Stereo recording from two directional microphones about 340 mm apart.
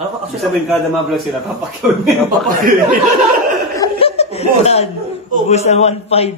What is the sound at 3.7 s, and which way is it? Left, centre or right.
Laughter, centre.